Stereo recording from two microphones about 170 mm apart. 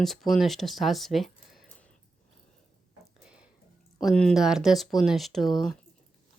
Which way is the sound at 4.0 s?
Centre (ahead or behind).